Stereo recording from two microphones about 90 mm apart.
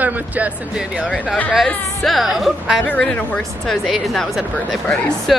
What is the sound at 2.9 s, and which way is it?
Speech, 15° left (ahead or behind).